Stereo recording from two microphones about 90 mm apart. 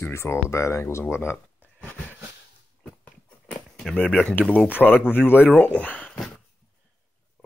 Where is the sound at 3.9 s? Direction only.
10° left (ahead or behind).